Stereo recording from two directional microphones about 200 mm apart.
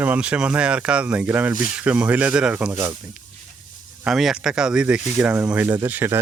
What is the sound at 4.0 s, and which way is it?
Speech, centre (ahead or behind).